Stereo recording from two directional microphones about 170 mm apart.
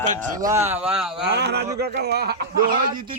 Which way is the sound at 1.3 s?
80° right.